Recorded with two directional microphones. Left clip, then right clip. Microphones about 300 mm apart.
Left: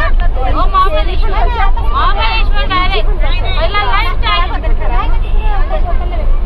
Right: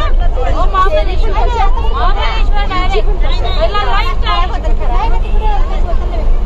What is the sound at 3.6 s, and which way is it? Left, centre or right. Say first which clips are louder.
Vehicle: left 1 dB; centre.